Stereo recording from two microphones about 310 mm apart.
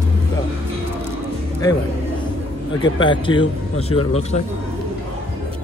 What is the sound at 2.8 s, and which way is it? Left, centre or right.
A man's voice, centre.